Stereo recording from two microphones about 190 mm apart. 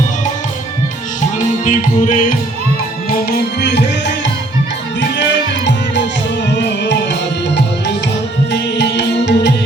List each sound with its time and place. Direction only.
1.6 s music: 45° left (ahead or behind)
3.1 s tabla: 60° left (ahead or behind)
4.9 s music: 65° left (ahead or behind)
8.5 s music: 65° left (ahead or behind)